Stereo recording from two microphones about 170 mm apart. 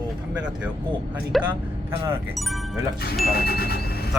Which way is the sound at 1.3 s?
Centre (ahead or behind).